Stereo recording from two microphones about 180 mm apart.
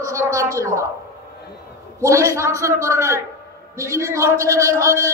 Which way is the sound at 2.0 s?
15° right (ahead or behind).